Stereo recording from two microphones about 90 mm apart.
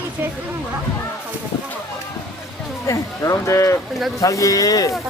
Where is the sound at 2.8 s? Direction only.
35° left (ahead or behind).